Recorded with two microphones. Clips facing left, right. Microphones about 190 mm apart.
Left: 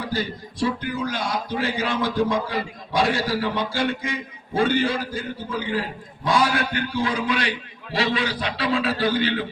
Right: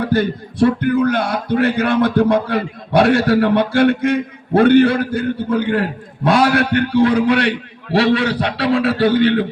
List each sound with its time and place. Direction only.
0.0 s a man's voice: 60° right (ahead or behind)